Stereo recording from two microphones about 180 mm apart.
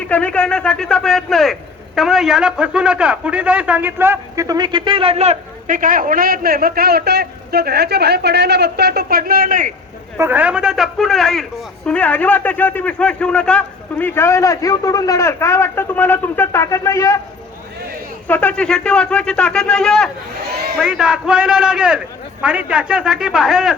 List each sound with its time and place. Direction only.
0.1 s a man's voice: 5° left (ahead or behind); by 9.7 s 50° right (ahead or behind)
10.2 s a man's voice: 10° right (ahead or behind); by 17.2 s 15° left (ahead or behind)
18.3 s a man's voice: 10° left (ahead or behind)